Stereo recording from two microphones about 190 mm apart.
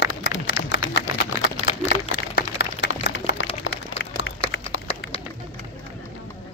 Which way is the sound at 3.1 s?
70° left (ahead or behind).